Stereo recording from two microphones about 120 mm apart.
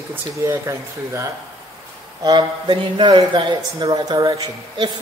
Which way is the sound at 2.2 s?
40° right (ahead or behind).